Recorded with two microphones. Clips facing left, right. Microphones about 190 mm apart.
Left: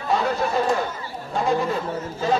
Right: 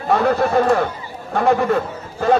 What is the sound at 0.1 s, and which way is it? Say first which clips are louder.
A man's voice: right 6 dB; 55° right (ahead or behind).